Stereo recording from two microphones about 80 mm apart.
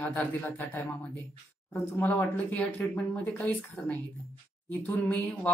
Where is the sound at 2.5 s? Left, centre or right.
Centre.